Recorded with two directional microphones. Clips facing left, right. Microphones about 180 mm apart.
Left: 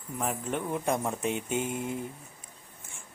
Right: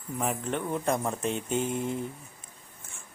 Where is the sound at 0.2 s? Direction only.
Centre (ahead or behind).